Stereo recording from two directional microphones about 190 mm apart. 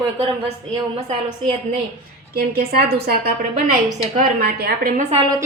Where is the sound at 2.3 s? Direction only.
55° right (ahead or behind).